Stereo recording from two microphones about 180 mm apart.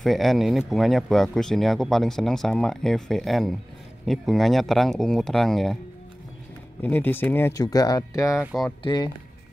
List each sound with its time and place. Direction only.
0.0 s speech: centre (ahead or behind)
6.8 s speech: 10° left (ahead or behind)
8.4 s speech: centre (ahead or behind)
8.8 s speech: 25° left (ahead or behind)